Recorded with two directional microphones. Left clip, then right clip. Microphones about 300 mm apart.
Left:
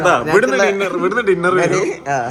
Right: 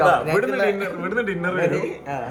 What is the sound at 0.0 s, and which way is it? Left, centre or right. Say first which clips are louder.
A man's voice: left 5 dB; centre.